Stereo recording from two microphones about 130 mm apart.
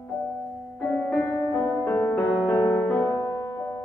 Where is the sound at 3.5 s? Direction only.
20° left (ahead or behind).